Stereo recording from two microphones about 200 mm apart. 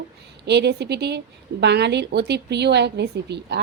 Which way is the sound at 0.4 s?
55° right (ahead or behind).